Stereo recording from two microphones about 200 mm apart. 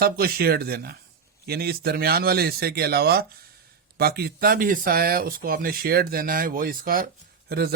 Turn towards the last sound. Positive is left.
turn(degrees=-50)  # may be behind; listen again after turning